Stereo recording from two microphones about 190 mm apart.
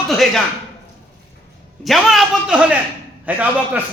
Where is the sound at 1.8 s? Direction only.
Centre (ahead or behind).